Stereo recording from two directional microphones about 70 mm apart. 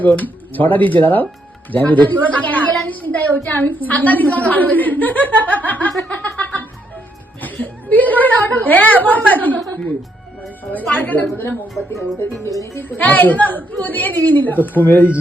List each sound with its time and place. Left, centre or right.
0.0 s a woman's voice: left
6.3 s music: left
7.4 s a woman's voice: left
10.7 s a woman's voice: left
11.7 s speech: centre
13.0 s a woman's voice: left